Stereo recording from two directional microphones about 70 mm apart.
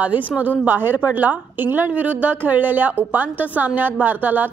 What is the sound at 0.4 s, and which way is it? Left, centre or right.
A woman's voice, right.